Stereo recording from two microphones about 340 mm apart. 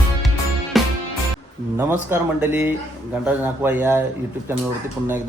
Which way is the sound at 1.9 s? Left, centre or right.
Centre.